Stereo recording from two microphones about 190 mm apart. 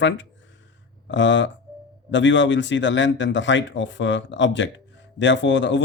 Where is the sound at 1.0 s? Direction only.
75° left (ahead or behind).